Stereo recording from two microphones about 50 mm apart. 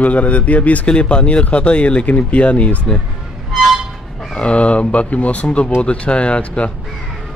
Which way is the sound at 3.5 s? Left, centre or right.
Centre.